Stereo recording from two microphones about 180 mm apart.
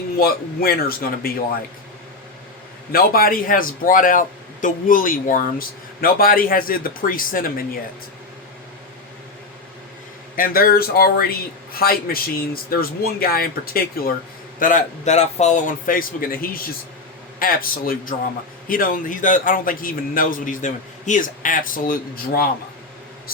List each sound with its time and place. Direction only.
0.2 s a man's voice: 55° left (ahead or behind)
2.9 s a man's voice: 55° left (ahead or behind)
10.3 s a man's voice: 50° left (ahead or behind)
14.6 s a man's voice: 45° left (ahead or behind)